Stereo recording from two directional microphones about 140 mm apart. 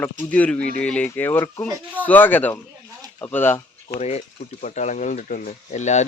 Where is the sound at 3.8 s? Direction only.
50° left (ahead or behind).